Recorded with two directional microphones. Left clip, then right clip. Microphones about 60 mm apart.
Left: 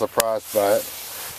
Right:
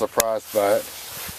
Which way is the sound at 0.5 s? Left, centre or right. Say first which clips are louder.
Even; left.